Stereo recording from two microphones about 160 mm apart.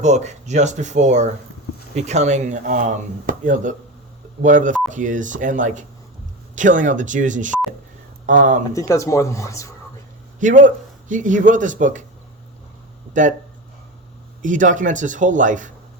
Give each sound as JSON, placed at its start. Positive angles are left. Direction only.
{"t": 0.0, "sound": "speech", "side_deg": -45}
{"t": 8.7, "sound": "speech", "side_deg": 20}
{"t": 10.4, "sound": "speech", "side_deg": -50}
{"t": 13.2, "sound": "speech", "side_deg": -50}
{"t": 14.4, "sound": "speech", "side_deg": -55}